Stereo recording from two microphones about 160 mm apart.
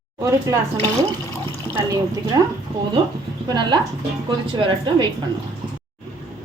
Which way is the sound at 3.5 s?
30° right (ahead or behind).